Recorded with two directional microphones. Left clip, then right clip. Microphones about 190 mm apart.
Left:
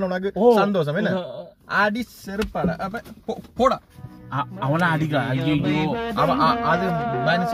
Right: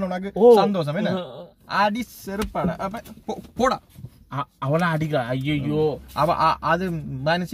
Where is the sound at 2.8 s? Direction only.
15° right (ahead or behind).